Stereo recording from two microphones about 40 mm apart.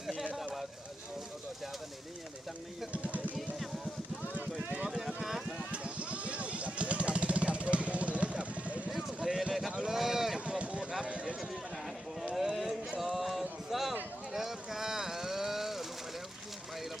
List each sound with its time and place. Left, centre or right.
2.9 s vehicle: right
4.7 s vehicle: right
4.9 s vehicle: centre
5.7 s vehicle: right
9.2 s a sound: centre
10.0 s run: centre
10.6 s a sound: right
11.0 s run: right
12.3 s a sound: centre